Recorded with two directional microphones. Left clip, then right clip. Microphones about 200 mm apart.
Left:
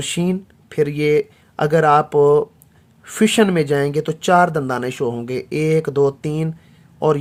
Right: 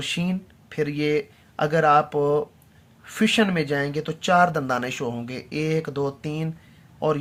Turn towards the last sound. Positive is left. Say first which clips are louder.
# left 6 dB
turn(degrees=45)  # may be behind; listen again after turning